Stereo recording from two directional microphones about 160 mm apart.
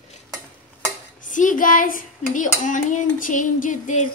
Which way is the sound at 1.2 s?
55° left (ahead or behind).